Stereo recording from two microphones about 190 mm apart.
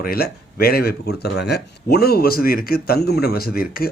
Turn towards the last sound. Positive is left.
turn(degrees=50)  # may be behind; listen again after turning